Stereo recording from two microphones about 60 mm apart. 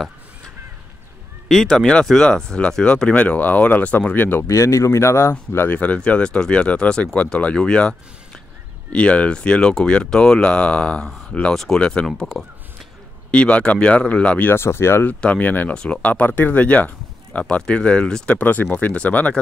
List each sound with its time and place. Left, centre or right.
1.5 s speech: centre; by 4.4 s left
4.4 s speech: left
5.7 s speech: left
8.9 s speech: centre
11.5 s speech: centre
14.4 s speech: left
15.0 s speech: left
15.7 s speech: centre
18.4 s speech: left